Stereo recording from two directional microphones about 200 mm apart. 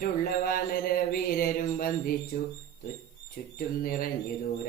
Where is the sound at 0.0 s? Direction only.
45° left (ahead or behind).